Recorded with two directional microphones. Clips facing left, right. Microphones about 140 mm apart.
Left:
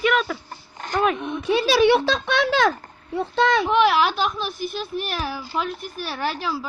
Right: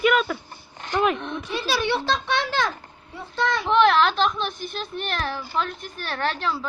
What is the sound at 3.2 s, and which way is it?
Speech, 75° left (ahead or behind).